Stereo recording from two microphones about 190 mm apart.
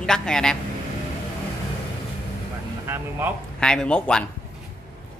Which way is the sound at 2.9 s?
10° right (ahead or behind).